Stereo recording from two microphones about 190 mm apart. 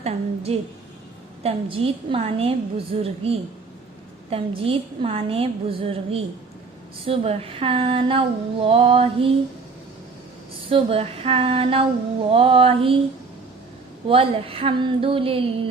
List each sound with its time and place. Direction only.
0.0 s a woman's voice: 35° right (ahead or behind)
10.7 s a woman's voice: 30° right (ahead or behind)
14.1 s a woman's voice: 30° right (ahead or behind)